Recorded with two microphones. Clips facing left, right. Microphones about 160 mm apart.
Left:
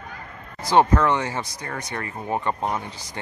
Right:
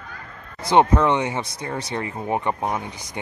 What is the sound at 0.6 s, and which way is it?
Speech, 20° right (ahead or behind).